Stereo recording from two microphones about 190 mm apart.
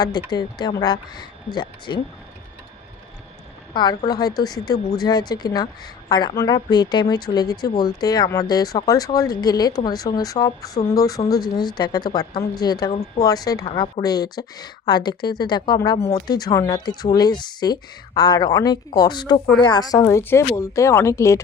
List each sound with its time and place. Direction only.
0.3 s speech: 20° left (ahead or behind)
3.8 s speech: 20° left (ahead or behind)
12.9 s speech: 35° left (ahead or behind)
13.2 s speech: 20° left (ahead or behind)